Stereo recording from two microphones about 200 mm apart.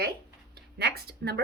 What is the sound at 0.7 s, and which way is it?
Speech, 50° right (ahead or behind).